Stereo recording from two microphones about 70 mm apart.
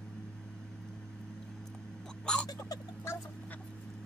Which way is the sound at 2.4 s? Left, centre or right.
Left.